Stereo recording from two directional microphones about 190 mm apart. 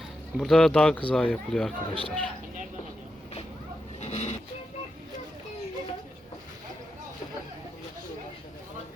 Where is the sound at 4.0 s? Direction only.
35° left (ahead or behind).